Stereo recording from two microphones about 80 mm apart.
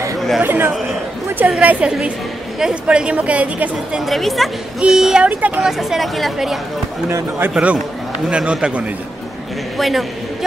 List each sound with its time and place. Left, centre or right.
0.4 s a woman's voice: right
4.0 s a woman's voice: centre
5.2 s speech: centre
5.6 s a woman's voice: centre
7.5 s a woman's voice: centre
9.8 s a man's voice: centre